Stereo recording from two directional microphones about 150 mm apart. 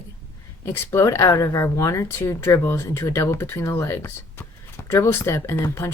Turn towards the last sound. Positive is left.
turn(degrees=20)  # may be behind; listen again after turning